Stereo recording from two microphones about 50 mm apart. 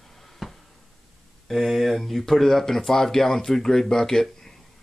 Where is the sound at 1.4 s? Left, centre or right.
Centre.